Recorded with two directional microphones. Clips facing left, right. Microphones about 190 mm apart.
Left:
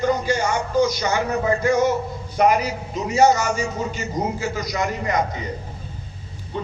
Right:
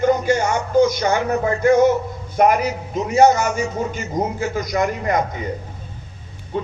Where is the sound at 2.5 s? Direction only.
55° right (ahead or behind).